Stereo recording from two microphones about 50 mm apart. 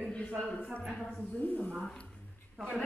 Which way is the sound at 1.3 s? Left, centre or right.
Left.